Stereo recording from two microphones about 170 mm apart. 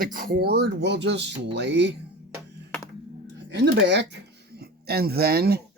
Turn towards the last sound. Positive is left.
turn(degrees=-65)  # may be behind; listen again after turning